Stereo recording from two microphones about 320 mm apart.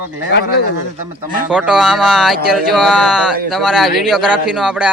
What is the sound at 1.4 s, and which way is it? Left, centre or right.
Speech, centre.